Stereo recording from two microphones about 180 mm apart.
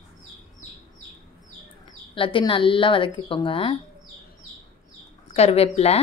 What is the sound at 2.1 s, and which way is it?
Speech, 30° left (ahead or behind).